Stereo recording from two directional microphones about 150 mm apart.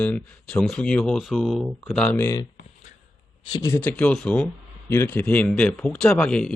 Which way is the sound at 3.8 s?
10° left (ahead or behind).